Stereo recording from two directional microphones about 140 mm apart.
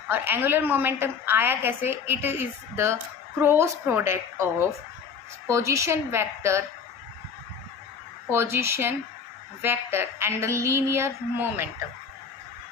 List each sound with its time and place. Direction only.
0.1 s a woman's voice: 15° right (ahead or behind)
8.3 s a woman's voice: 20° right (ahead or behind)